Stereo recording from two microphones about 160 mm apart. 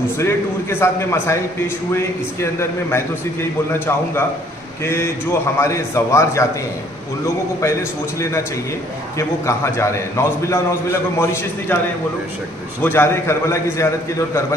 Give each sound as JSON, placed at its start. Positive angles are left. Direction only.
{"t": 0.2, "sound": "a man's voice", "side_deg": 15}
{"t": 9.5, "sound": "a man's voice", "side_deg": 20}
{"t": 12.8, "sound": "a man's voice", "side_deg": 15}